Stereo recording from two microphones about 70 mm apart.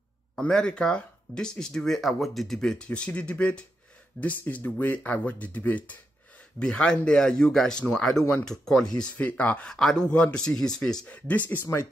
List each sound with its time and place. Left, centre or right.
0.4 s speech: centre
9.7 s speech: centre
11.1 s speech: left